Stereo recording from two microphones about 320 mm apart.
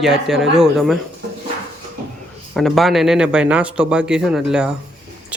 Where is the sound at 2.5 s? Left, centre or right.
Centre.